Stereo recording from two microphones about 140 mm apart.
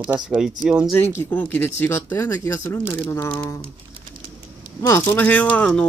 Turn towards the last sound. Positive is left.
turn(degrees=5)  # may be behind; listen again after turning